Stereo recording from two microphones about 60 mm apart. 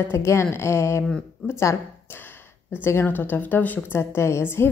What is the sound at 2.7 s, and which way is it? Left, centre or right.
A woman's voice, left.